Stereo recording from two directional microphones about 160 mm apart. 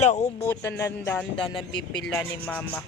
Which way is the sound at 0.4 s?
15° left (ahead or behind).